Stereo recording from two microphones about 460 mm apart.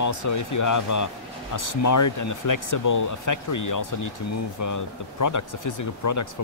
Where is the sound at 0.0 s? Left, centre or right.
Left.